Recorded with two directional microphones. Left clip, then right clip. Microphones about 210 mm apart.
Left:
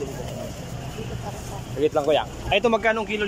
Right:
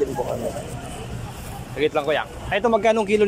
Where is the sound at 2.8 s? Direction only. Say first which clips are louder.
Right 4 dB; 20° right (ahead or behind).